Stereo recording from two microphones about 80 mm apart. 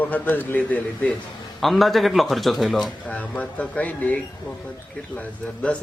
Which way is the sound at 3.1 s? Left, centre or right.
Centre.